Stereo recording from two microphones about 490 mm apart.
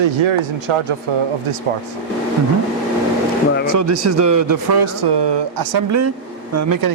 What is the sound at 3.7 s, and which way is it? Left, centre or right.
Speech, right.